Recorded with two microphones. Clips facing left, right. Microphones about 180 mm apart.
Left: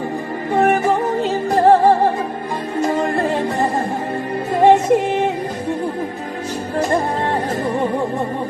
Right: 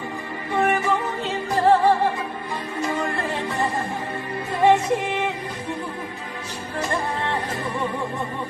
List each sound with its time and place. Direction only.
0.5 s music: 45° left (ahead or behind)
6.7 s music: 45° left (ahead or behind)